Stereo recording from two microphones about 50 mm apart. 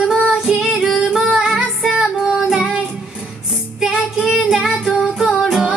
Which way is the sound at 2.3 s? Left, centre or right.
Centre.